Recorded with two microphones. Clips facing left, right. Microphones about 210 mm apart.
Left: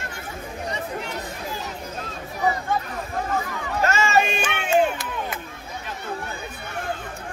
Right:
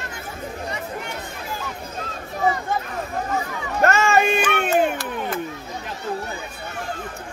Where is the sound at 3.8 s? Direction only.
55° right (ahead or behind).